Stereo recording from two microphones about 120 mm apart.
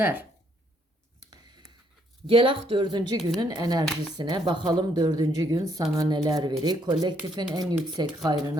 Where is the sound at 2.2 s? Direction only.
50° right (ahead or behind).